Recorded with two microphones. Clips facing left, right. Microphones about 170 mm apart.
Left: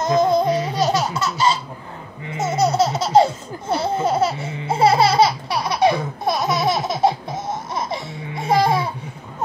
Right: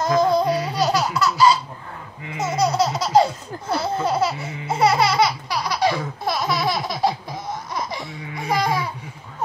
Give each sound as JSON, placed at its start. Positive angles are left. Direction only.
{"t": 0.0, "sound": "laughter", "side_deg": 20}